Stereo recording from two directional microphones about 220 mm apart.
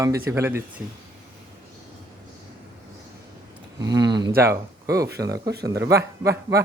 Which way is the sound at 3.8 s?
15° right (ahead or behind).